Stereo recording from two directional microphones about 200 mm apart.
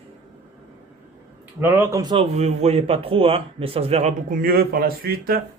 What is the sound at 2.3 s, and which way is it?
A man's voice, 35° right (ahead or behind).